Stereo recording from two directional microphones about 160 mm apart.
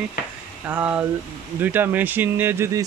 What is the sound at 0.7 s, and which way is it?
Speech, 10° right (ahead or behind).